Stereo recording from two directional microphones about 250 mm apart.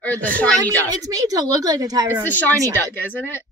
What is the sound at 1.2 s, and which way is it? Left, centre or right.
A woman's voice, centre.